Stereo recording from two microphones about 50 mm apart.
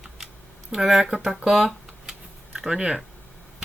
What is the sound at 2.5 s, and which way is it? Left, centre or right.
Speech, centre.